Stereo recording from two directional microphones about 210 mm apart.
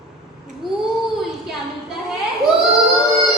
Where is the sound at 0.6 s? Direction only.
Centre (ahead or behind).